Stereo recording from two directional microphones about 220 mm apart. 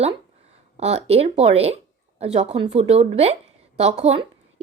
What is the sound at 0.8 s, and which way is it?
A woman's voice, 30° right (ahead or behind).